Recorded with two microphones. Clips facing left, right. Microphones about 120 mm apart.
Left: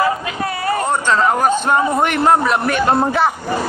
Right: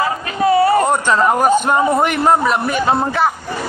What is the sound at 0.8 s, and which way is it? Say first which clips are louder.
A man's voice: right 1 dB; 10° right (ahead or behind).